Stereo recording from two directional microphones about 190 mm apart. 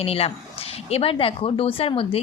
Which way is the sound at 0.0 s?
30° left (ahead or behind).